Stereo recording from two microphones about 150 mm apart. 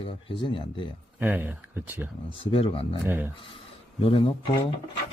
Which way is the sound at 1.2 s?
15° right (ahead or behind).